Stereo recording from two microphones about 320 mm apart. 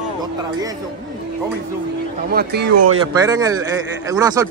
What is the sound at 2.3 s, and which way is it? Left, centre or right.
Speech, right.